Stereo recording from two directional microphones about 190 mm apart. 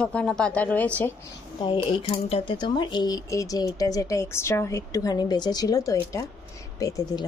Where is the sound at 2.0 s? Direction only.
30° left (ahead or behind).